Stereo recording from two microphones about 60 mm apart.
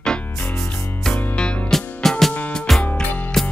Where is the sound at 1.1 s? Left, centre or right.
Left.